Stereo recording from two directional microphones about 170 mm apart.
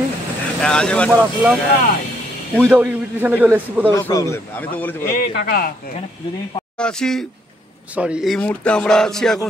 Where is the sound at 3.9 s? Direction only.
20° left (ahead or behind).